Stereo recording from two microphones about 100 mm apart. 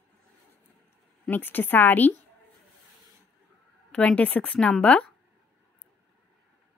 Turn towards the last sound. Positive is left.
turn(degrees=10)  # may be behind; listen again after turning